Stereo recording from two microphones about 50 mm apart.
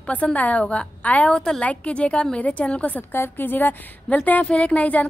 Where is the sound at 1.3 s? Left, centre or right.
Centre.